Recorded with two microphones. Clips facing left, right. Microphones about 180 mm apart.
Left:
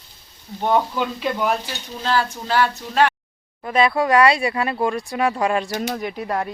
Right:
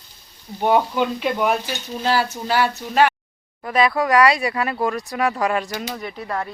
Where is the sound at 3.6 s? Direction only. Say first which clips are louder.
Left 1 dB; 25° left (ahead or behind).